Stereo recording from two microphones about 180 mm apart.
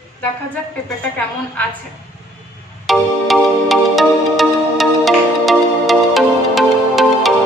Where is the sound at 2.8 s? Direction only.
Centre (ahead or behind).